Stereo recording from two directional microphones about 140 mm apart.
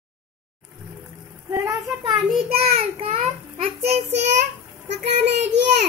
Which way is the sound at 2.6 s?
45° right (ahead or behind).